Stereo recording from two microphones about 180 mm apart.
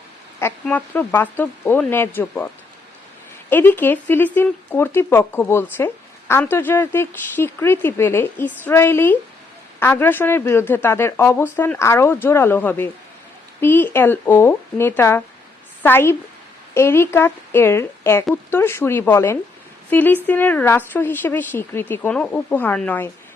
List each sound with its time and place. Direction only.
0.6 s a woman's voice: 10° left (ahead or behind)
3.5 s a woman's voice: 10° left (ahead or behind)